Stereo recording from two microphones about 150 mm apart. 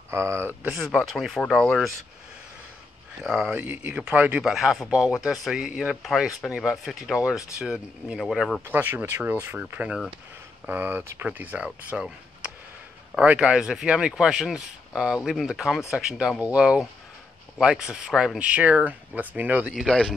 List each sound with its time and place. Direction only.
0.1 s speech: 20° right (ahead or behind)
0.7 s speech: centre (ahead or behind)
3.2 s speech: 5° right (ahead or behind)
8.6 s speech: 15° right (ahead or behind); by 20.2 s centre (ahead or behind)